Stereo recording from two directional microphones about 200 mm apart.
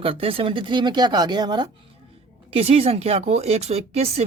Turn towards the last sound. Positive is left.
turn(degrees=-30)  # may be behind; listen again after turning